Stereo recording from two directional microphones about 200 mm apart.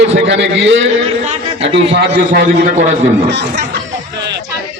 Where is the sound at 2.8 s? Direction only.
35° right (ahead or behind).